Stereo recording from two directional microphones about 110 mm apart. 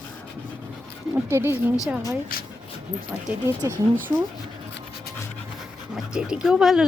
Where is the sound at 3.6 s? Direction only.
30° right (ahead or behind).